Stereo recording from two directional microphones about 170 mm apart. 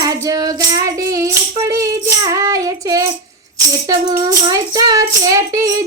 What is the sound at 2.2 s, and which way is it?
Child singing, 20° right (ahead or behind).